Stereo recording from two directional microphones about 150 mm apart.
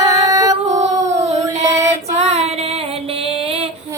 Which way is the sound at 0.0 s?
25° right (ahead or behind).